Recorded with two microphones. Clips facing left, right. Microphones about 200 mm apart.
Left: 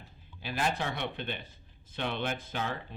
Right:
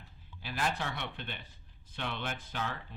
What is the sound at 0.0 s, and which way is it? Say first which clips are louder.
Speech: left 4 dB; 20° left (ahead or behind).